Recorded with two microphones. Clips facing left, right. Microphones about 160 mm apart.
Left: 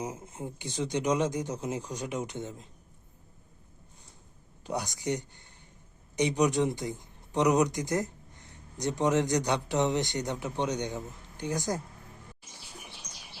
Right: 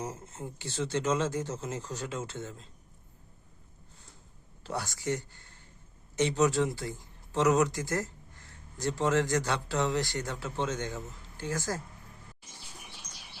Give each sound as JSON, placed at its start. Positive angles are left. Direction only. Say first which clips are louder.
{"t": 0.0, "sound": "speech", "louder": "left 2 dB", "side_deg": 10}
{"t": 4.6, "sound": "speech", "louder": "left 2 dB", "side_deg": 15}